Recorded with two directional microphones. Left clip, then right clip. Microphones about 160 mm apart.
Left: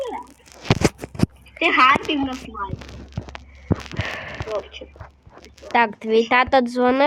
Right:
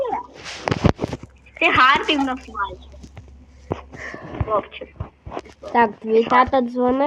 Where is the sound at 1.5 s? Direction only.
90° left.